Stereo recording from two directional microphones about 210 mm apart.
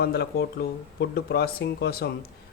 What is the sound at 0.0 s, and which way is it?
A man's voice, 50° left (ahead or behind).